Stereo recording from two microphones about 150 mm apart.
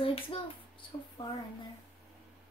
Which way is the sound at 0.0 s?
35° left (ahead or behind).